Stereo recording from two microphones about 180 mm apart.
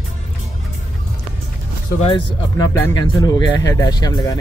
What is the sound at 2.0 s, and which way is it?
Speech, 30° left (ahead or behind).